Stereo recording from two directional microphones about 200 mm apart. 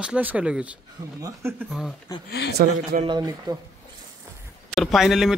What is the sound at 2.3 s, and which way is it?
Speech, 60° left (ahead or behind).